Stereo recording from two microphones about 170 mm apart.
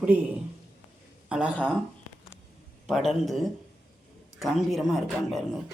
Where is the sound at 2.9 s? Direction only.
Centre (ahead or behind).